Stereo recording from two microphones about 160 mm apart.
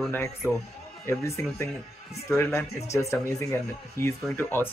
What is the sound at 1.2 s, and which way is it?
Speech, 20° left (ahead or behind).